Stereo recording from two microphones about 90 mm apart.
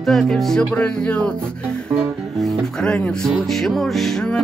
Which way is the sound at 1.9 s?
5° left (ahead or behind).